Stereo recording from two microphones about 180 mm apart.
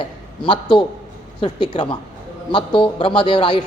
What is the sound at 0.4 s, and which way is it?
A man's voice, 30° left (ahead or behind).